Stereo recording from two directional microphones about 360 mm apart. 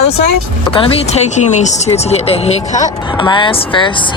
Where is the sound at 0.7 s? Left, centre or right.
Centre.